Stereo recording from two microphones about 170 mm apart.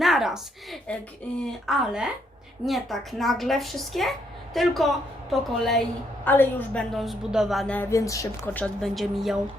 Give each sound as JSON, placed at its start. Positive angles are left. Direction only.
{"t": 0.0, "sound": "a woman's voice", "side_deg": 0}
{"t": 6.9, "sound": "a woman's voice", "side_deg": 0}
{"t": 7.8, "sound": "speech", "side_deg": 15}
{"t": 8.6, "sound": "a woman's voice", "side_deg": 0}